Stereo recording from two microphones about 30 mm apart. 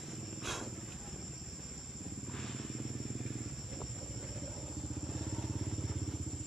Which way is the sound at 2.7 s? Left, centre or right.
Centre.